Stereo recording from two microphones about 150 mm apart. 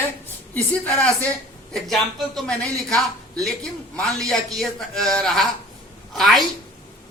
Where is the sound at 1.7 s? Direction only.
Centre (ahead or behind).